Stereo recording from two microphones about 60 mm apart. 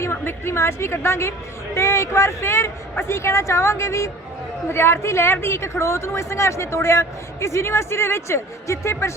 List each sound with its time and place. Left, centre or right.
0.0 s speech: left